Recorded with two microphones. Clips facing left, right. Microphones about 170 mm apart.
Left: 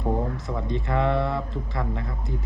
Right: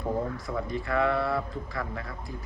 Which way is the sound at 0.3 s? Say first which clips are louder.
Left 2 dB; 20° left (ahead or behind).